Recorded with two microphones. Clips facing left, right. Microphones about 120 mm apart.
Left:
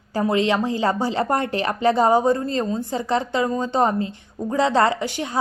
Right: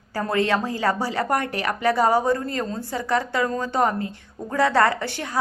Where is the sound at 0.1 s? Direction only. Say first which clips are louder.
Left 2 dB; 20° left (ahead or behind).